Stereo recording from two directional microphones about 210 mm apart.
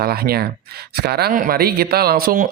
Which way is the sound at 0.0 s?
45° right (ahead or behind).